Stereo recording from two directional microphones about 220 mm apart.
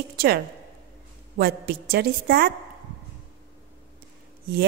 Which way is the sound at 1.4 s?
45° right (ahead or behind).